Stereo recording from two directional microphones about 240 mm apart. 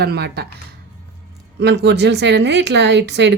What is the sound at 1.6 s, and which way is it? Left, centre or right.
Speech, right.